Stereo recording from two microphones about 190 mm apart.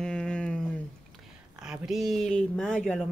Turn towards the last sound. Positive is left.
turn(degrees=5)  # may be behind; listen again after turning